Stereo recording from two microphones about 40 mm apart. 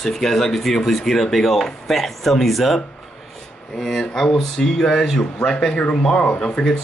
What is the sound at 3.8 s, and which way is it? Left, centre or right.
Speech, centre.